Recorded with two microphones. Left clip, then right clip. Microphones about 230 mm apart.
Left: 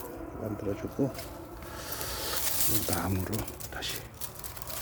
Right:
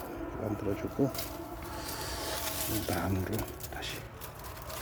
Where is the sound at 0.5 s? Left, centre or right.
Centre.